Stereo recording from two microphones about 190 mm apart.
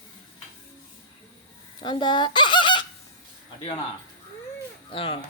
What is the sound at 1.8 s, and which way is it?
Fowl, 25° left (ahead or behind).